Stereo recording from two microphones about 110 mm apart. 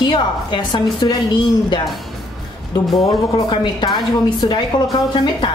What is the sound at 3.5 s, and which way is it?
A woman's voice, 40° left (ahead or behind).